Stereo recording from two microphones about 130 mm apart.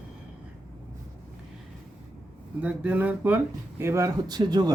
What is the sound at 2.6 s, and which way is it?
Speech, 10° right (ahead or behind).